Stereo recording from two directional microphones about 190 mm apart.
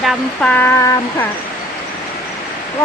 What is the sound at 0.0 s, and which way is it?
Speech, centre (ahead or behind).